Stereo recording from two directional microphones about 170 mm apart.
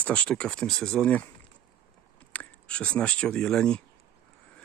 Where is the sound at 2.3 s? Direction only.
10° left (ahead or behind).